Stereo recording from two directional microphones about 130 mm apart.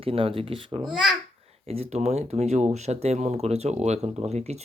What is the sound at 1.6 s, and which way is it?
Speech, 50° right (ahead or behind).